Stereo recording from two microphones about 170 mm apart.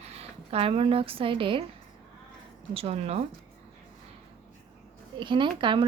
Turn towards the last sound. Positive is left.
turn(degrees=-30)  # may be behind; listen again after turning